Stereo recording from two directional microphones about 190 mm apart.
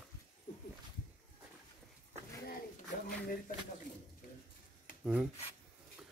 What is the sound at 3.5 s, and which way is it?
Speech, 45° left (ahead or behind).